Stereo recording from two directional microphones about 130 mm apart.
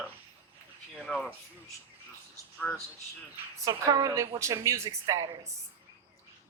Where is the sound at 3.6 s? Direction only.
25° right (ahead or behind).